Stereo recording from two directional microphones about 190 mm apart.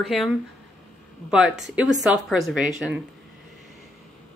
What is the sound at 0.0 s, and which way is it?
Speech, centre (ahead or behind).